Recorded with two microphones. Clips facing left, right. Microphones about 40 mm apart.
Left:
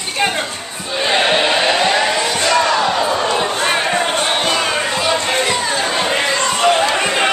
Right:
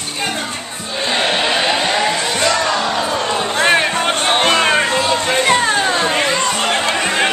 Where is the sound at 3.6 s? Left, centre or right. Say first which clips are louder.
Right 2 dB; right.